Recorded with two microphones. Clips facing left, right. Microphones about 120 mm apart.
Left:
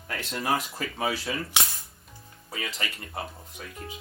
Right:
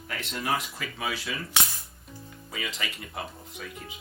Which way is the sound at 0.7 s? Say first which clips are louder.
Left 4 dB; 45° left (ahead or behind).